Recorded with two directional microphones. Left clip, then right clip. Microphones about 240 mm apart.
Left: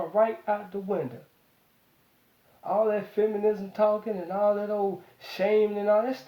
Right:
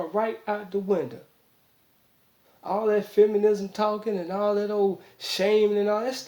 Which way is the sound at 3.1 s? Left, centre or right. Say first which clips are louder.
Right 8 dB; right.